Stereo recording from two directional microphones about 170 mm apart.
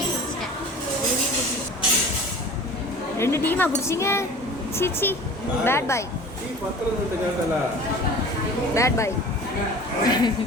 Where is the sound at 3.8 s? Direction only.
15° left (ahead or behind).